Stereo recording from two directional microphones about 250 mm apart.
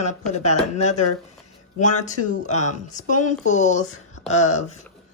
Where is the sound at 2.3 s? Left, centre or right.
Left.